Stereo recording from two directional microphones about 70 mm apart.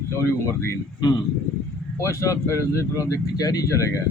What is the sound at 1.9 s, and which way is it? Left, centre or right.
Speech, left.